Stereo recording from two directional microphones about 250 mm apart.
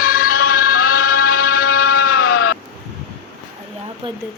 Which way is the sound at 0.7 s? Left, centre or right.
Left.